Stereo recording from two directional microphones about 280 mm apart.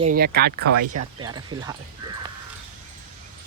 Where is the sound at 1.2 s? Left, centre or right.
Centre.